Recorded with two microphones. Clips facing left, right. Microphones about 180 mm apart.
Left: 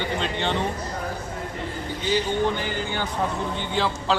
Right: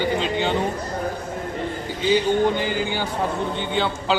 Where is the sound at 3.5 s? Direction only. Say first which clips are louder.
Right 2 dB; centre (ahead or behind).